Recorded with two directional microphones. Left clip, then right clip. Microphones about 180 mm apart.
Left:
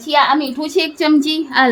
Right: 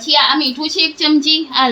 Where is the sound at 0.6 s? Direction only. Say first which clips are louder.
Right 1 dB; 70° left (ahead or behind).